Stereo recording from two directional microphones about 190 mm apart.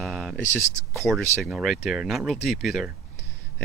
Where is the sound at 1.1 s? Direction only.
Centre (ahead or behind).